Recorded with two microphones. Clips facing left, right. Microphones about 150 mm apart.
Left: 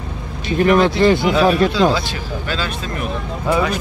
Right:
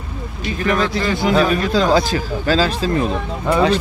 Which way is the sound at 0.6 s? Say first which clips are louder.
Left 6 dB; 30° left (ahead or behind).